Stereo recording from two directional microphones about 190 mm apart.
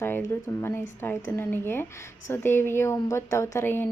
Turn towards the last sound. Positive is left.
turn(degrees=10)  # may be behind; listen again after turning